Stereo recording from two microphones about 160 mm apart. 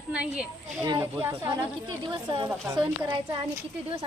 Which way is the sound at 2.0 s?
30° right (ahead or behind).